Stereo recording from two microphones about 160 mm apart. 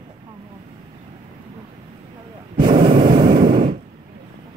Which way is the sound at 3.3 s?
60° right (ahead or behind).